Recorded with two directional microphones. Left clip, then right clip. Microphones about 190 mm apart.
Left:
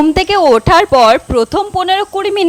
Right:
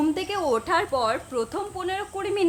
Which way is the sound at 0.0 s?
50° left (ahead or behind).